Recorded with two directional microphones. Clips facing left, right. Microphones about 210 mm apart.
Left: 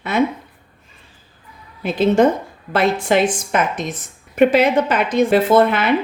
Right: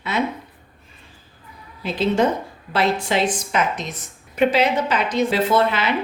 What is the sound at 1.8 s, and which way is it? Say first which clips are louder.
Speech: left 5 dB; 50° left (ahead or behind).